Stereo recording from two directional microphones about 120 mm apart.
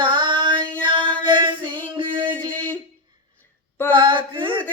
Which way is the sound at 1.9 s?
40° right (ahead or behind).